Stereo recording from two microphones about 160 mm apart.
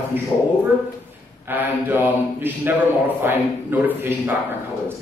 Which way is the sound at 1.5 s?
10° right (ahead or behind).